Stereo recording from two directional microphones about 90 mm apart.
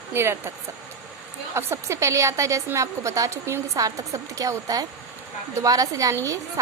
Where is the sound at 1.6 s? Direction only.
30° right (ahead or behind).